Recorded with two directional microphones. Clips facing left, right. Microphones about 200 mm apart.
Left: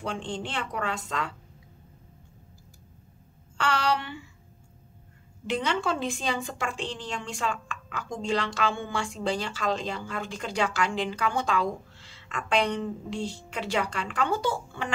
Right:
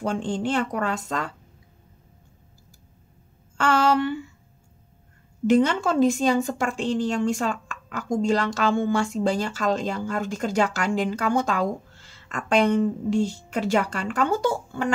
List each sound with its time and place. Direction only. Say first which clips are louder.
0.0 s a woman's voice: right 7 dB; 45° right (ahead or behind)
3.5 s a woman's voice: right 6 dB; 45° right (ahead or behind)
5.5 s a woman's voice: right 8 dB; 45° right (ahead or behind)